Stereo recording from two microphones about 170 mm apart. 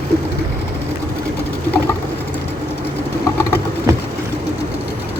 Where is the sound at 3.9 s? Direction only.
20° right (ahead or behind).